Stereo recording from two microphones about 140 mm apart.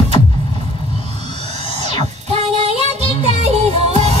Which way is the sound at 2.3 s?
50° right (ahead or behind).